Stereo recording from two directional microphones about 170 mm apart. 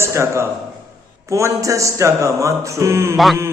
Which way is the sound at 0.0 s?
15° right (ahead or behind).